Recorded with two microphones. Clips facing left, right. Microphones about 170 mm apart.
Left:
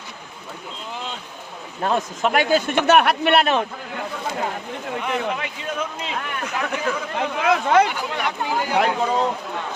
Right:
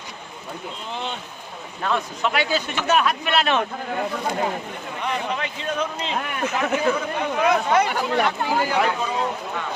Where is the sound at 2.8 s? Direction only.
70° left (ahead or behind).